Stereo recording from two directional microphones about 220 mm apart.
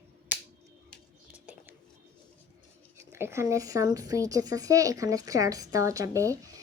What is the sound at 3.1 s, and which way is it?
Speech, 10° right (ahead or behind).